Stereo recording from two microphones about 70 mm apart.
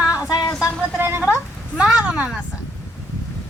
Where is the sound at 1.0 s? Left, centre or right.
Right.